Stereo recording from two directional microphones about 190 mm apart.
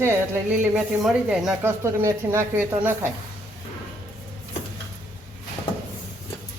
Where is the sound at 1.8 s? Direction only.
15° right (ahead or behind).